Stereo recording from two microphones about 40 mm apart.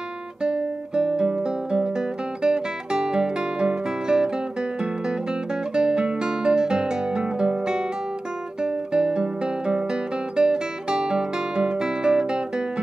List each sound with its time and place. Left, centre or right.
0.4 s guitar: right